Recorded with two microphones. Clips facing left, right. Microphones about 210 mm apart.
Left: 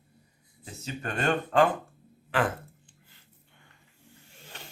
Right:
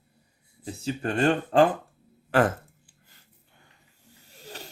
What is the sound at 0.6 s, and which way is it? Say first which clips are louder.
Speech: right 7 dB; 30° right (ahead or behind).